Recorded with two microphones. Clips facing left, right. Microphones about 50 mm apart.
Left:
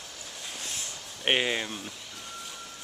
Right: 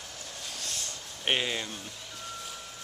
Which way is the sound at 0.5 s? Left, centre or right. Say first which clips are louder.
Left 1 dB; left.